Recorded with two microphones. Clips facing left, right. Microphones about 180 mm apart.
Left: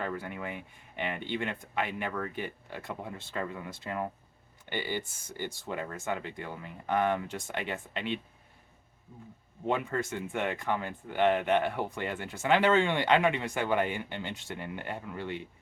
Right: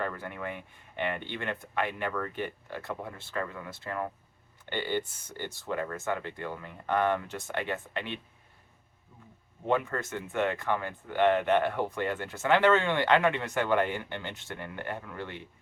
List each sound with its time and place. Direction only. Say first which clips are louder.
0.0 s speech: right 1 dB; 15° left (ahead or behind)
9.6 s speech: right 1 dB; 15° left (ahead or behind)